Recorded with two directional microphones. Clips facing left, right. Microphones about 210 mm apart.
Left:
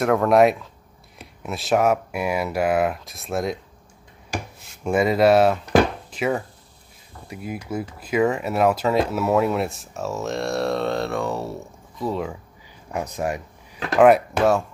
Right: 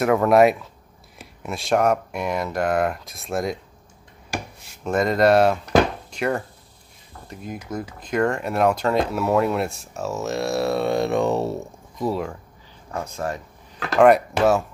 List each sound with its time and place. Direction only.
0.0 s speech: centre (ahead or behind)
4.8 s speech: 5° left (ahead or behind); by 11.5 s 20° right (ahead or behind)
12.0 s speech: 5° right (ahead or behind)
12.9 s speech: 15° left (ahead or behind)
13.9 s speech: centre (ahead or behind)